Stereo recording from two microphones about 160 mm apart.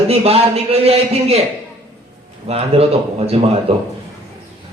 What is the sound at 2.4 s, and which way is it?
Speech, 40° right (ahead or behind).